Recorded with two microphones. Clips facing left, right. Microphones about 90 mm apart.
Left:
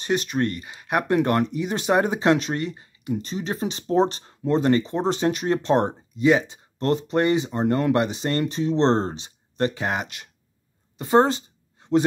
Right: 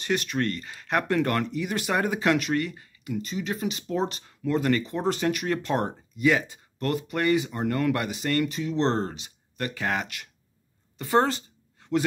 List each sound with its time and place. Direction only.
0.0 s speech: 20° left (ahead or behind)
3.3 s speech: 35° left (ahead or behind)
11.0 s a sound: 20° left (ahead or behind)